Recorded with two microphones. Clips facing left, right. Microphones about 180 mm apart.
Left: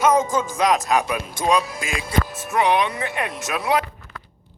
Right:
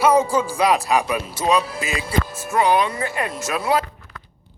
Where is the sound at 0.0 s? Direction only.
10° right (ahead or behind).